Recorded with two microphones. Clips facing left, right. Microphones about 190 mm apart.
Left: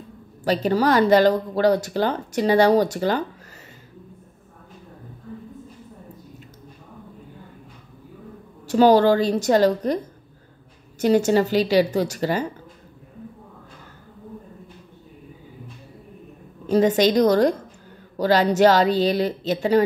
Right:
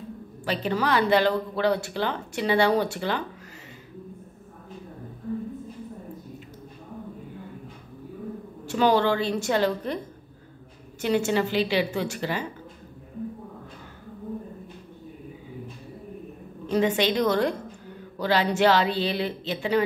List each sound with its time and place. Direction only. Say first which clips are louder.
0.5 s speech: left 6 dB; 40° left (ahead or behind)
8.6 s speech: left 7 dB; 40° left (ahead or behind)
11.0 s speech: left 6 dB; 40° left (ahead or behind)
16.7 s speech: left 6 dB; 40° left (ahead or behind)